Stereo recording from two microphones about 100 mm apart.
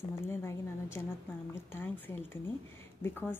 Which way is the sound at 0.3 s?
25° left (ahead or behind).